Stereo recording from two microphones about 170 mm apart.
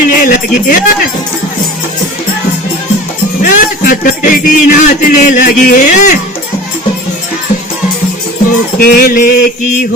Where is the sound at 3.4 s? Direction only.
50° left (ahead or behind).